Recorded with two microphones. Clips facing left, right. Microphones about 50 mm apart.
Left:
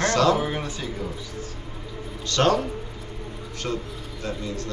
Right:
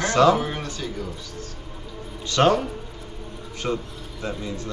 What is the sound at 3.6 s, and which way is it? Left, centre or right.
A man's voice, centre.